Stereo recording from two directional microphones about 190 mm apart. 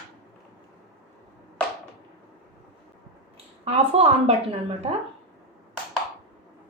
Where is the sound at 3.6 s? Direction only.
30° right (ahead or behind).